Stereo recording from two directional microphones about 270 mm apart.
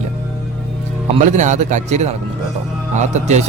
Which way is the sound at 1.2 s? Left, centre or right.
Right.